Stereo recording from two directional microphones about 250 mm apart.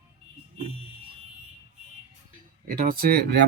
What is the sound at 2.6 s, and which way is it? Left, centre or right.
Speech, right.